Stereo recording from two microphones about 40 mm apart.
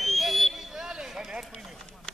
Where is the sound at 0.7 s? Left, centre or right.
Centre.